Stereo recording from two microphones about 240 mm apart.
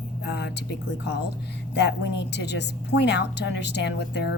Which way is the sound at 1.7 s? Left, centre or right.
Left.